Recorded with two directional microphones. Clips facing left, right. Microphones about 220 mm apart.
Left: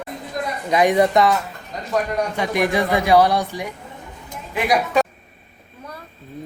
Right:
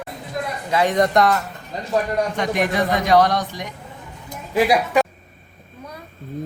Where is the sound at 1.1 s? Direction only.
Centre (ahead or behind).